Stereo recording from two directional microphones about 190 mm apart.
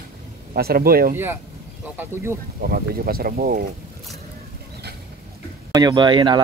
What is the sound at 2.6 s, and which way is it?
Speech, 50° right (ahead or behind).